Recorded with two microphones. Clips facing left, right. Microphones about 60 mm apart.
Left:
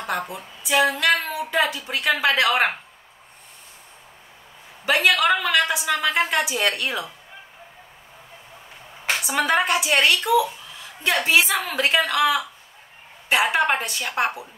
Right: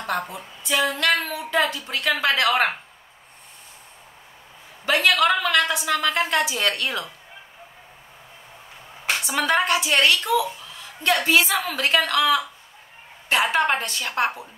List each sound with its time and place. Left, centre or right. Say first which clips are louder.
0.0 s speech: even; centre
4.8 s speech: even; centre
9.2 s a woman's voice: left 1 dB; centre
11.2 s a woman's voice: even; centre